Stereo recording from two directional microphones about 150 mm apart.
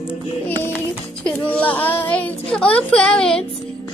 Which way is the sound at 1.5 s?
10° left (ahead or behind).